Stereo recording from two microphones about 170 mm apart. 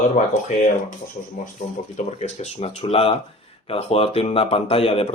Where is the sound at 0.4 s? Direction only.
45° left (ahead or behind).